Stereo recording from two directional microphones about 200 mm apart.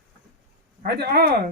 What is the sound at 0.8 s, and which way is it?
Speech, 55° right (ahead or behind).